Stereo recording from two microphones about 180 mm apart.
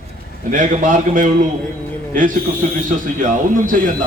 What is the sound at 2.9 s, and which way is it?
Speech, 45° right (ahead or behind).